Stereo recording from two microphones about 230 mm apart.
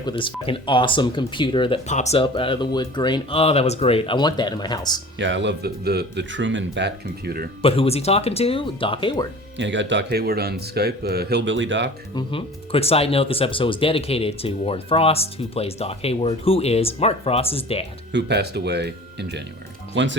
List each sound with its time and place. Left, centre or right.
0.0 s speech: left
5.2 s speech: right
7.6 s speech: left
9.6 s speech: right
12.1 s speech: left
18.1 s speech: right